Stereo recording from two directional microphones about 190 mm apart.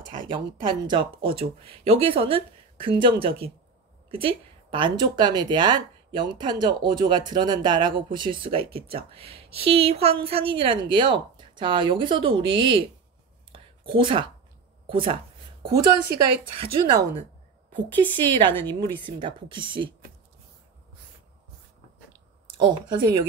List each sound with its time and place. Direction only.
0.1 s speech: 25° right (ahead or behind)
13.5 s a sound: 25° right (ahead or behind)
14.9 s speech: 30° right (ahead or behind)
16.4 s speech: 25° right (ahead or behind)
18.5 s a woman's voice: 10° left (ahead or behind)
19.0 s speech: 25° right (ahead or behind)
22.6 s speech: 25° right (ahead or behind)